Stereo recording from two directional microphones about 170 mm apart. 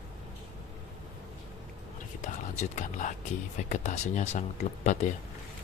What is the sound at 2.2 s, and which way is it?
Speech, 45° left (ahead or behind).